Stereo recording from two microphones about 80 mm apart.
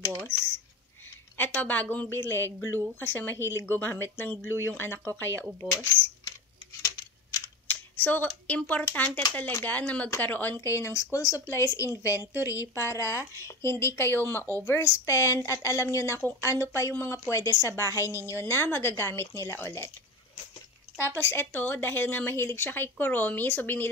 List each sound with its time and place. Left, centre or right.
0.2 s speech: left
1.6 s speech: centre
2.1 s speech: left
7.6 s a sound: left
8.6 s speech: left
10.6 s a woman's voice: left
21.2 s speech: left